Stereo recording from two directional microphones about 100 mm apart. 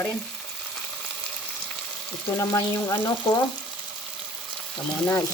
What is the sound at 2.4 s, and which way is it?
Frying, 30° left (ahead or behind).